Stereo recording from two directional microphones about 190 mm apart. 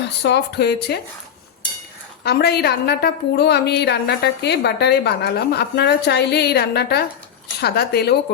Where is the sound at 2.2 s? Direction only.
55° left (ahead or behind).